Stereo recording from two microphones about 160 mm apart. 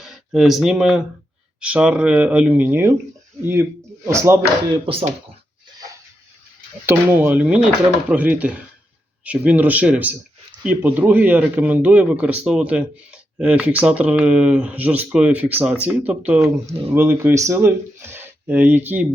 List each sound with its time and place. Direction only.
0.0 s speech: centre (ahead or behind)
4.7 s speech: 35° right (ahead or behind)
6.8 s speech: 15° right (ahead or behind)